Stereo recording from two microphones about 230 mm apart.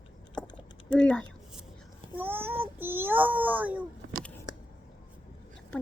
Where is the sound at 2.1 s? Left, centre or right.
Centre.